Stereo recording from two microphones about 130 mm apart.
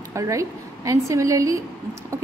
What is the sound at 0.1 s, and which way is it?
A woman's voice, 25° right (ahead or behind).